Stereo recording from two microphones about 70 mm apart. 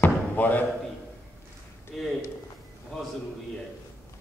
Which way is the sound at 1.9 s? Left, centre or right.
Centre.